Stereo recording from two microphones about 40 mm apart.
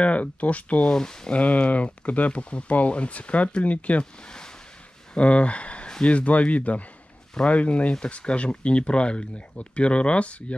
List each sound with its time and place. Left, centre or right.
0.0 s speech: left
0.9 s speech: centre
1.3 s speech: left
4.0 s speech: centre
5.1 s speech: left